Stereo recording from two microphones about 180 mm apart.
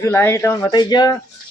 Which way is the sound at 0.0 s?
15° left (ahead or behind).